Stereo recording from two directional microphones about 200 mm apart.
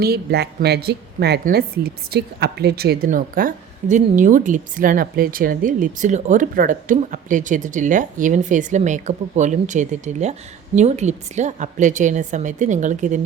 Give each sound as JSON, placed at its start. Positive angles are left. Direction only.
{"t": 0.0, "sound": "a woman's voice", "side_deg": -55}